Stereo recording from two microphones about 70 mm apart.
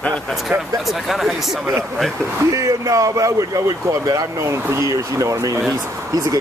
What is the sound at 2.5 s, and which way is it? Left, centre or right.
Speech, right.